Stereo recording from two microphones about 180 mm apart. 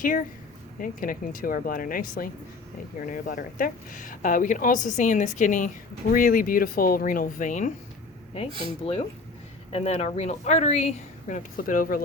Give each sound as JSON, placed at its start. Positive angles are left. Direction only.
{"t": 0.0, "sound": "a woman's voice", "side_deg": 50}
{"t": 9.7, "sound": "speech", "side_deg": 35}